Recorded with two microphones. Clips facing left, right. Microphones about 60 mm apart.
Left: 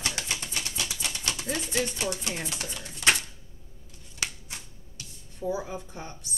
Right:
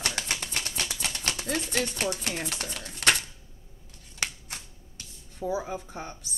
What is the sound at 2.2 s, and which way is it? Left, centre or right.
Speech, right.